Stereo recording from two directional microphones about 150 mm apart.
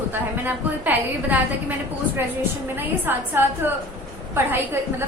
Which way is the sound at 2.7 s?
15° right (ahead or behind).